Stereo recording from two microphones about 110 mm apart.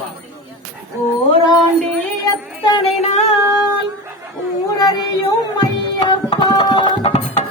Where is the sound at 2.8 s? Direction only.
70° left (ahead or behind).